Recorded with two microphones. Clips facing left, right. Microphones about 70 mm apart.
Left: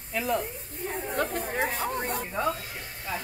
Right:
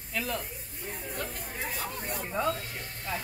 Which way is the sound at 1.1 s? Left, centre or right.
Left.